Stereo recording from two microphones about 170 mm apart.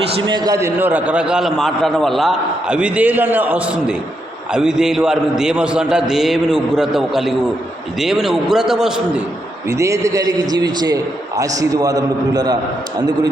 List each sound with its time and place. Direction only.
0.3 s a man's voice: 25° right (ahead or behind); by 9.2 s 5° right (ahead or behind)
9.6 s a man's voice: 15° right (ahead or behind)